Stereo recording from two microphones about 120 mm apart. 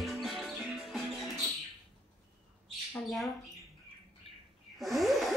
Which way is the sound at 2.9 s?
Centre (ahead or behind).